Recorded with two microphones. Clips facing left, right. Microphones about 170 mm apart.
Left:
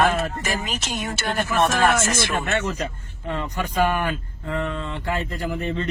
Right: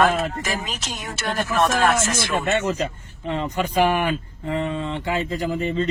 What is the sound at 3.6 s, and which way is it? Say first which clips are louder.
Speech: right 2 dB; 15° right (ahead or behind).